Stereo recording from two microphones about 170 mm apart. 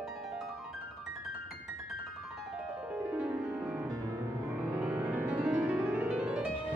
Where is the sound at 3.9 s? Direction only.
20° right (ahead or behind).